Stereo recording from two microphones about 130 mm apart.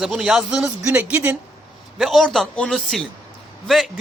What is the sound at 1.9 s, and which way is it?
Speech, centre (ahead or behind).